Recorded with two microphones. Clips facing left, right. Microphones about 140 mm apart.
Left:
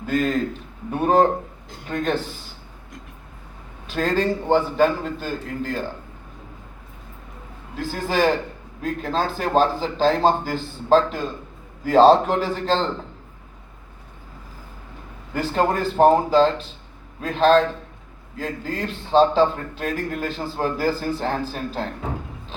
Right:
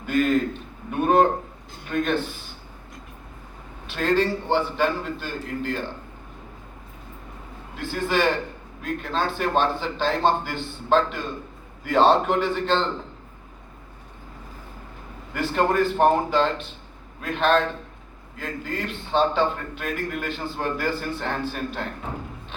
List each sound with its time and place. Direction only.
0.0 s a man's voice: 35° left (ahead or behind)
3.8 s a man's voice: 40° left (ahead or behind)
7.8 s a man's voice: 40° left (ahead or behind)
15.3 s a man's voice: 35° left (ahead or behind)